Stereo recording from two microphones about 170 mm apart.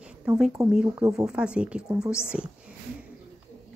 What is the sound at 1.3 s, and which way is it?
Speech, 5° right (ahead or behind).